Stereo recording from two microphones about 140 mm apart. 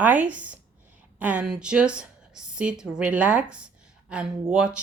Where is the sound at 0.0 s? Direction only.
10° right (ahead or behind).